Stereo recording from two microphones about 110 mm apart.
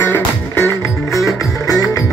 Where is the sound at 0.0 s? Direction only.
20° left (ahead or behind).